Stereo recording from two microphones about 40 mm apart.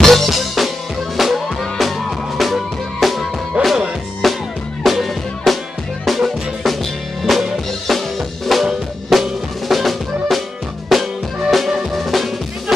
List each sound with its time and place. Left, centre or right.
0.0 s music: centre
3.6 s music: right
4.2 s music: centre
8.5 s drum: centre
10.9 s music: centre